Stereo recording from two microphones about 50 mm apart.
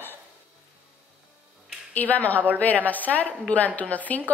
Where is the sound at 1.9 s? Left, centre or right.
Left.